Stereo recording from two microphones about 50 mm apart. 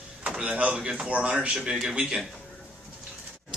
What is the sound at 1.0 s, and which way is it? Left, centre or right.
A man's voice, right.